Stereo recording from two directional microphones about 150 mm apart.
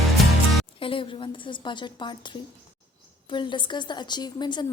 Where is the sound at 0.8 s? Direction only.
35° left (ahead or behind).